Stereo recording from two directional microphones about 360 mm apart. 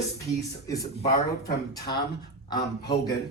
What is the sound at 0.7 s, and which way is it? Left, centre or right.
A man's voice, centre.